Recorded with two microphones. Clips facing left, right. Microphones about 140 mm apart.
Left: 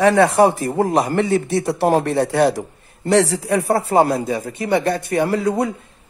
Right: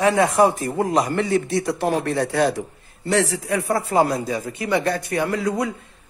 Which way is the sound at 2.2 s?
65° left (ahead or behind).